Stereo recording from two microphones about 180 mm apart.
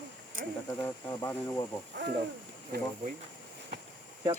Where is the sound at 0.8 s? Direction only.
15° left (ahead or behind).